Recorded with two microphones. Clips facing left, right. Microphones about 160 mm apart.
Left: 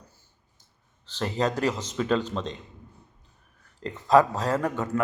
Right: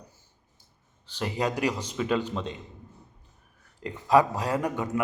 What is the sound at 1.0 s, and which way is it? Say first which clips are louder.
A man's voice: left 2 dB; 10° right (ahead or behind).